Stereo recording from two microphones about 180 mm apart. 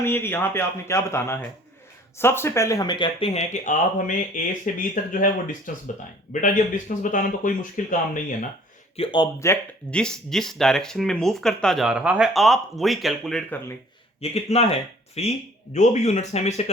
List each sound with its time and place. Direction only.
0.0 s speech: 10° left (ahead or behind); by 8.4 s 45° left (ahead or behind)
9.0 s speech: 25° left (ahead or behind); by 13.6 s 5° left (ahead or behind)
14.2 s speech: 35° left (ahead or behind)